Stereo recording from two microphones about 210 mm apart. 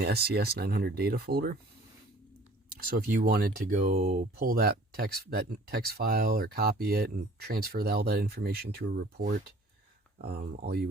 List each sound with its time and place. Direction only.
0.0 s speech: 45° right (ahead or behind)
2.7 s speech: 40° right (ahead or behind)
3.9 s speech: 35° right (ahead or behind)